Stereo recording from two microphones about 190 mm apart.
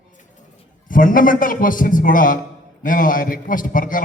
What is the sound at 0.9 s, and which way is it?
A man's voice, 45° left (ahead or behind).